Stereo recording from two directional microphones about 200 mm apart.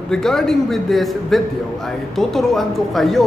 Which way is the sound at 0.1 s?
Centre (ahead or behind).